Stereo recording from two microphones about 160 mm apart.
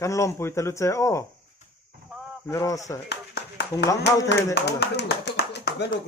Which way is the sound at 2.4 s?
20° left (ahead or behind).